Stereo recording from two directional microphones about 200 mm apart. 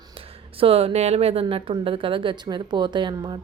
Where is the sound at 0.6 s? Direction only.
30° right (ahead or behind).